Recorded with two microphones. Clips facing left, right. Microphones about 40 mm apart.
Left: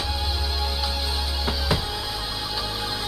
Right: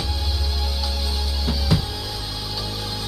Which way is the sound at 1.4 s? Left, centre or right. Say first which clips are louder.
Right 2 dB; centre.